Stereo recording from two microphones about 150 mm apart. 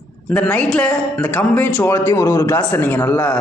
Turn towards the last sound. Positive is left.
turn(degrees=10)  # may be behind; listen again after turning